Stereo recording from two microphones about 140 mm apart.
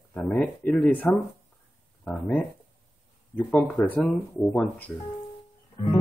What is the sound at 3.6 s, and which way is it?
Speech, 10° left (ahead or behind).